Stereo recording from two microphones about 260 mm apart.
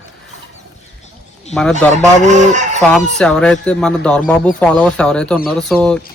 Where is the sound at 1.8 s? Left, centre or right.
Centre.